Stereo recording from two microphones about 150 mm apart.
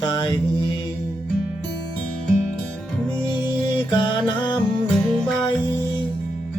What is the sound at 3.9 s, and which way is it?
Music, 30° left (ahead or behind).